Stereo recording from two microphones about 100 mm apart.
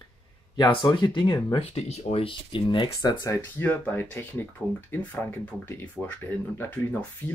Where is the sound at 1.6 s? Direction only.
90° left; by 2.9 s 55° left (ahead or behind).